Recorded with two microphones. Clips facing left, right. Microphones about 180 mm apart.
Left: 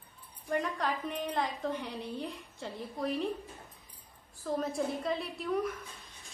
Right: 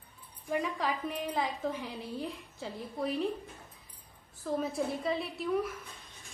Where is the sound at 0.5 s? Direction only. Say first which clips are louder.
Even; 5° right (ahead or behind).